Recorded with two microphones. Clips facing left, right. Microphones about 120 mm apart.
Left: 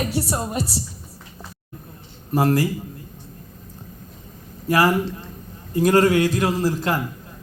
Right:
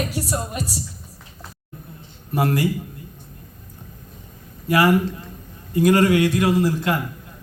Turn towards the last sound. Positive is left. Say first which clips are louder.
# right 2 dB
turn(degrees=35)  # may be behind; listen again after turning